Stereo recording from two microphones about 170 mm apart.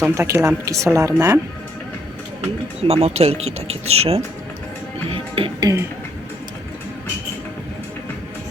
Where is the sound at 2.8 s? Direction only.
35° right (ahead or behind).